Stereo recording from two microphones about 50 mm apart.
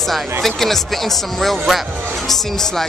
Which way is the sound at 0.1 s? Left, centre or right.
Centre.